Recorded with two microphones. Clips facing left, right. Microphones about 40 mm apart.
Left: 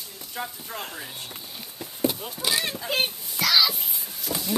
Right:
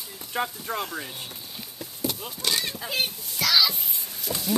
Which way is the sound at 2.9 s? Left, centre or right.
Left.